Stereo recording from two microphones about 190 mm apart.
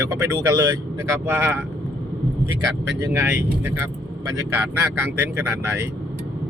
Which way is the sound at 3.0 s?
10° right (ahead or behind).